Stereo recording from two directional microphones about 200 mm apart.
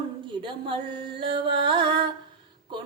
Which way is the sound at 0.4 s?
25° right (ahead or behind).